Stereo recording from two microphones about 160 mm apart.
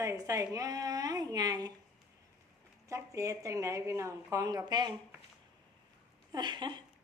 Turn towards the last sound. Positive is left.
turn(degrees=-30)  # may be behind; listen again after turning